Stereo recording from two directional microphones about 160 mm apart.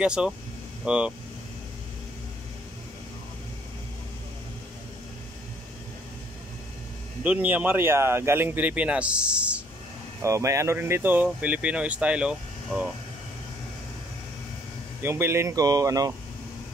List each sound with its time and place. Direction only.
0.0 s speech: 5° right (ahead or behind)
7.2 s speech: 10° right (ahead or behind)
10.2 s speech: 20° right (ahead or behind)
15.0 s speech: 15° right (ahead or behind)